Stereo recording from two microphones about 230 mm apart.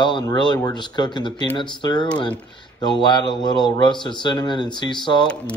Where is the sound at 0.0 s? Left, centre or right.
Centre.